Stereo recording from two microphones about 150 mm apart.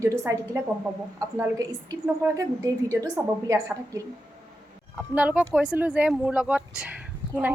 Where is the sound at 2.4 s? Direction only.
25° right (ahead or behind).